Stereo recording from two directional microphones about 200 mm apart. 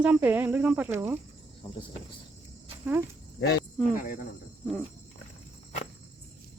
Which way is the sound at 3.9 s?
40° left (ahead or behind).